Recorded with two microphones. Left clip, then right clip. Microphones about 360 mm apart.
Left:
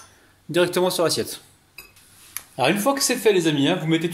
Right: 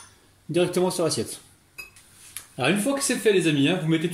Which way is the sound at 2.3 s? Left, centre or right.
Centre.